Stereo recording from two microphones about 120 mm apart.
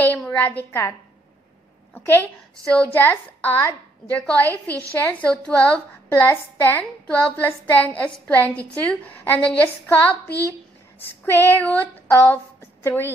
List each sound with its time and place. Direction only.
0.2 s a sound: 10° left (ahead or behind)
0.5 s a woman's voice: 20° left (ahead or behind)
2.0 s a woman's voice: 15° left (ahead or behind)
11.5 s a woman's voice: 15° left (ahead or behind)